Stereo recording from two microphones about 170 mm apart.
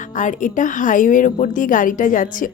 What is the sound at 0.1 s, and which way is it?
A woman's voice, 50° left (ahead or behind).